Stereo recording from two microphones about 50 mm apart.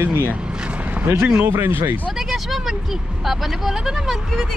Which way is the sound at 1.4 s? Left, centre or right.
Right.